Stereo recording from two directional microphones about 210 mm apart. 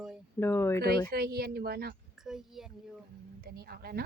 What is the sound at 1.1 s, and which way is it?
Speech, 45° right (ahead or behind).